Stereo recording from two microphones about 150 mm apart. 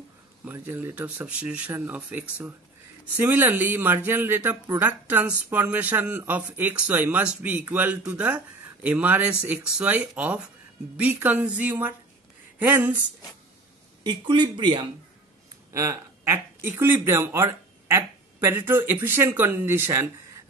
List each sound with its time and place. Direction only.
0.5 s speech: 15° right (ahead or behind)
14.0 s speech: 30° right (ahead or behind)
15.7 s speech: 20° right (ahead or behind)